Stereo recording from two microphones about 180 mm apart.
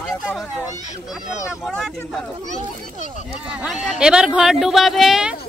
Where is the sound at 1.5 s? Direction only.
Centre (ahead or behind).